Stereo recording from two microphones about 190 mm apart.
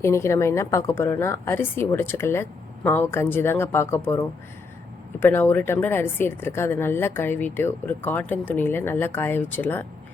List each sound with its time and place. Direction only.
0.0 s speech: 15° left (ahead or behind)